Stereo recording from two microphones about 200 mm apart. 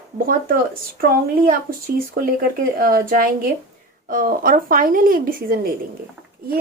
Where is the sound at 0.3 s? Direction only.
45° right (ahead or behind).